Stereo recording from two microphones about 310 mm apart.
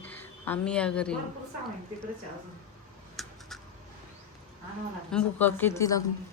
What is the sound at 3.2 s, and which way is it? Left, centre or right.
Computer keyboard, centre.